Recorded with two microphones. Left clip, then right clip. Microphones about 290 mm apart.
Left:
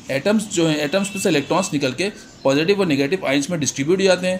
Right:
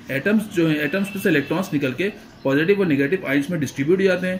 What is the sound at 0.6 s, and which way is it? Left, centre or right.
Speech, centre.